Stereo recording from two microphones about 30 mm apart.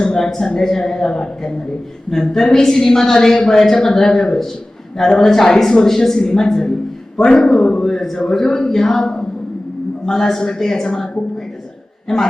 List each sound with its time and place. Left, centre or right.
0.3 s a woman's voice: centre
7.9 s a woman's voice: centre